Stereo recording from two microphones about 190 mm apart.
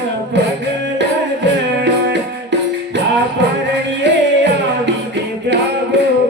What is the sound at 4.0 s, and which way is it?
Music, 65° right (ahead or behind).